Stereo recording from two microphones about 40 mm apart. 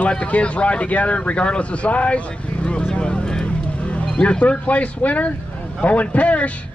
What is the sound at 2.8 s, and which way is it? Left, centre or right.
Vehicle, left.